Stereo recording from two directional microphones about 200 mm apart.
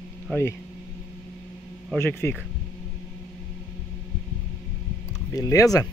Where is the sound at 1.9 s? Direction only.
10° left (ahead or behind).